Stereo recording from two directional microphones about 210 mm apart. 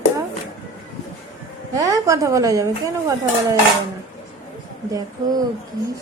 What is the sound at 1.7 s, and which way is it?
A woman's voice, 15° right (ahead or behind).